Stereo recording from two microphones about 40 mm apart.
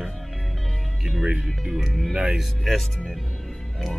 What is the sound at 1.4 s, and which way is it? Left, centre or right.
Speech, centre.